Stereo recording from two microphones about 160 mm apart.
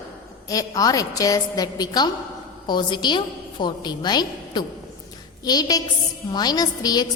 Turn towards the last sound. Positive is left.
turn(degrees=25)  # may be behind; listen again after turning